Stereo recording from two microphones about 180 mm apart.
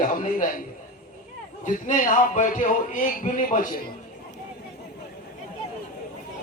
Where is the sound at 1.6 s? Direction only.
45° left (ahead or behind).